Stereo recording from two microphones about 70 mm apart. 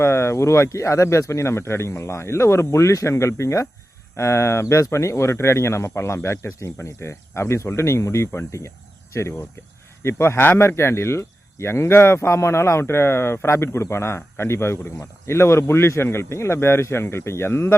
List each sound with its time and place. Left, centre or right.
0.0 s speech: left
10.0 s speech: left